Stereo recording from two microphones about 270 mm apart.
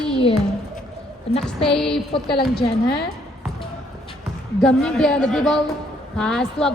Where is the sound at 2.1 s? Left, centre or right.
Centre.